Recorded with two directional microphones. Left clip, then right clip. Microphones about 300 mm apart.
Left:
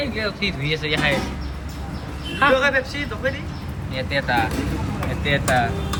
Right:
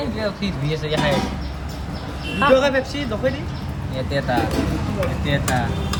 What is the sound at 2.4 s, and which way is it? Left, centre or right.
Speech, centre.